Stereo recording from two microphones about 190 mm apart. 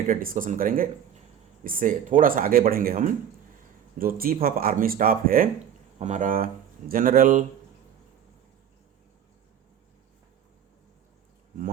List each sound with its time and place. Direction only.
0.1 s speech: 45° right (ahead or behind)